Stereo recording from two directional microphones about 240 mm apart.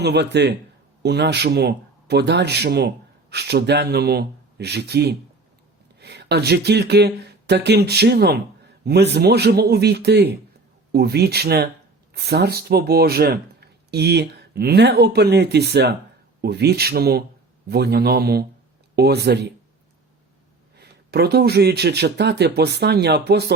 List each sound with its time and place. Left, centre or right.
0.0 s speech: right
20.7 s speech: right